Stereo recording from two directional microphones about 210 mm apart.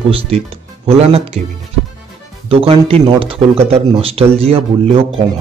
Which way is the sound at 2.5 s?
25° right (ahead or behind).